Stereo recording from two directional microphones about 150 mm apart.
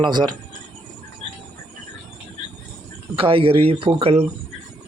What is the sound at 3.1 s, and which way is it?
Speech, 35° right (ahead or behind).